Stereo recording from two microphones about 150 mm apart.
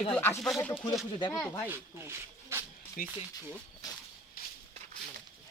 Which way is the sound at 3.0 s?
70° left (ahead or behind).